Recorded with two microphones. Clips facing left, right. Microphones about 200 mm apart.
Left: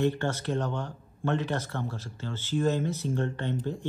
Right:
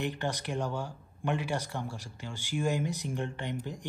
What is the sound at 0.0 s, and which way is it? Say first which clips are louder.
Speech: left 6 dB; 15° right (ahead or behind).